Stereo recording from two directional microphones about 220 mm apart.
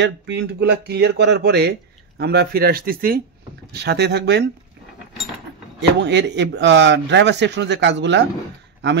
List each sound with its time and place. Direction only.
0.0 s speech: 55° right (ahead or behind)
5.8 s speech: 55° right (ahead or behind)